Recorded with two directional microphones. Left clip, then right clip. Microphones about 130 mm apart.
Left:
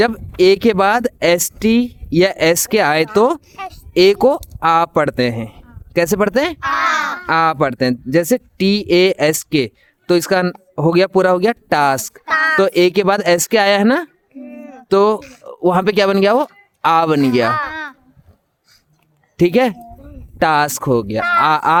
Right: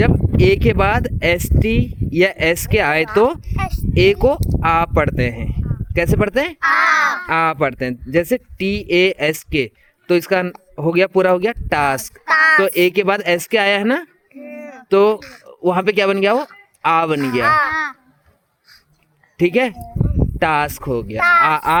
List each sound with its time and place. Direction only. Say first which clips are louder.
0.3 s speech: left 3 dB; 45° left (ahead or behind)
3.2 s speech: left 1 dB; 50° left (ahead or behind)
3.5 s a sound: right 4 dB; 55° right (ahead or behind)
3.9 s speech: left 3 dB; 45° left (ahead or behind)
12.3 s speech: right 3 dB; 60° right (ahead or behind)
12.5 s speech: left 1 dB; 45° left (ahead or behind)
14.4 s a sound: right 3 dB; 55° right (ahead or behind)
14.8 s speech: even; 55° left (ahead or behind)
19.4 s speech: left 2 dB; 50° left (ahead or behind)
21.2 s speech: right 5 dB; 55° right (ahead or behind)
21.4 s speech: left 2 dB; 50° left (ahead or behind)